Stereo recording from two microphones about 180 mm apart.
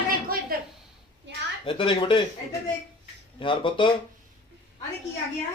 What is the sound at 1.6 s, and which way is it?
Speech, 30° left (ahead or behind).